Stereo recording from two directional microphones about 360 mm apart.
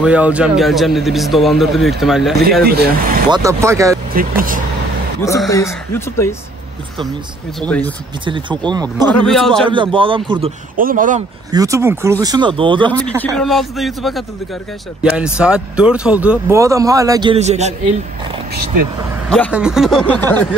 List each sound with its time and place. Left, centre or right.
0.0 s a man's voice: centre
2.6 s speech: right
3.3 s speech: centre
4.1 s speech: right
5.2 s speech: centre
7.6 s a man's voice: centre
8.3 s speech: centre
9.2 s a man's voice: centre
9.7 s speech: centre
11.5 s speech: centre
13.0 s a man's voice: centre
19.2 s a man's voice: centre